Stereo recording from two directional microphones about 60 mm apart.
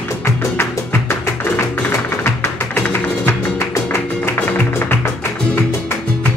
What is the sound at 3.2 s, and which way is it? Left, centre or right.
Music, left.